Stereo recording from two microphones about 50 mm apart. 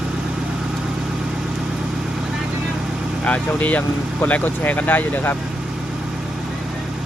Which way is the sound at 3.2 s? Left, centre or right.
Left.